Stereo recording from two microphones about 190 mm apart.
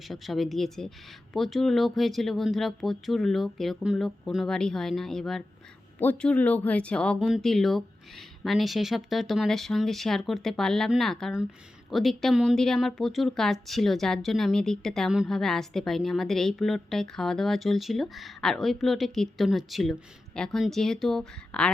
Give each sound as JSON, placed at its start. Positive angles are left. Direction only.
{"t": 0.1, "sound": "speech", "side_deg": 0}